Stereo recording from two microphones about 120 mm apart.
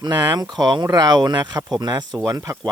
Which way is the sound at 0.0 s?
35° right (ahead or behind).